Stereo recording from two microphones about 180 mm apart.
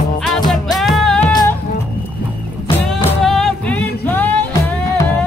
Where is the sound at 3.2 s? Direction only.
Centre (ahead or behind).